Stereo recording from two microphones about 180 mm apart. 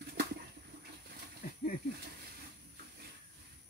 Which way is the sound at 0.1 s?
65° right (ahead or behind).